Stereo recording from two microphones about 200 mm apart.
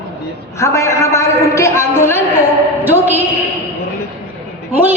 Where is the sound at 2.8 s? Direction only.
10° right (ahead or behind).